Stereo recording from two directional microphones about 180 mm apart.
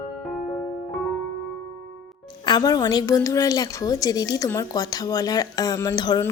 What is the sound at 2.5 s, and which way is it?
A woman's voice, 20° left (ahead or behind).